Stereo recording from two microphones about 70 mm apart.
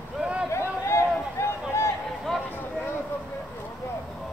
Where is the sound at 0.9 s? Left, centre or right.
Left.